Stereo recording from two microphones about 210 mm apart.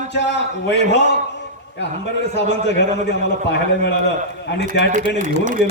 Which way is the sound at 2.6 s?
55° left (ahead or behind).